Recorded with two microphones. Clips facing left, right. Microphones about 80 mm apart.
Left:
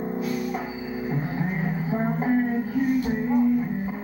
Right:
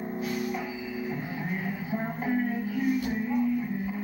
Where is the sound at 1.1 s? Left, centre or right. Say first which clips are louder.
Left 5 dB; left.